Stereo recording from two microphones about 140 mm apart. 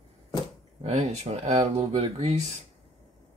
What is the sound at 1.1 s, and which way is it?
Speech, 50° right (ahead or behind).